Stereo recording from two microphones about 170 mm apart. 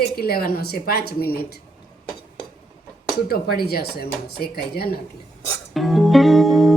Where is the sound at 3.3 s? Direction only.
65° left (ahead or behind).